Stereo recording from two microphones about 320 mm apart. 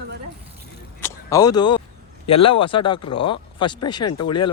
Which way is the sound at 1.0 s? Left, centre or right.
Centre.